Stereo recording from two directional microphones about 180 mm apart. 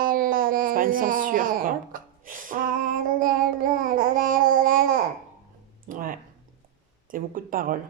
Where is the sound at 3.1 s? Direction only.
50° right (ahead or behind).